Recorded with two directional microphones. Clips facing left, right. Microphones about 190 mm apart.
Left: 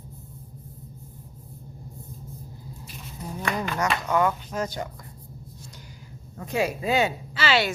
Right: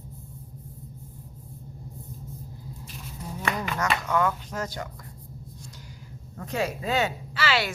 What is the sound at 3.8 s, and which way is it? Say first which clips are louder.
Speech: left 2 dB; 15° left (ahead or behind).